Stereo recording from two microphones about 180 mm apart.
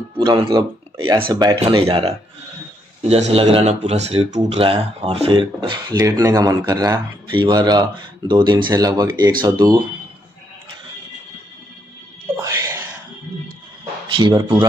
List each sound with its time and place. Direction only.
0.2 s speech: 20° right (ahead or behind)
12.4 s music: 15° right (ahead or behind)
14.1 s speech: 20° right (ahead or behind)